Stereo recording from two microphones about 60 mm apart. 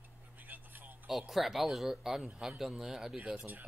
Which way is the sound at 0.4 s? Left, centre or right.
Right.